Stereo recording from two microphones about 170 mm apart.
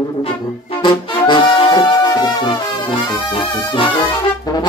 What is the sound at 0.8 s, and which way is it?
Brass instrument, 25° left (ahead or behind).